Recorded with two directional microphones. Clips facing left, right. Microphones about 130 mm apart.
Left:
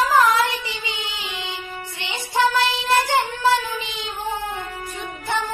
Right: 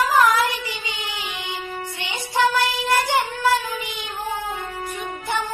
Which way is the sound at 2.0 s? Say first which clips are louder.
Left 1 dB; 25° left (ahead or behind).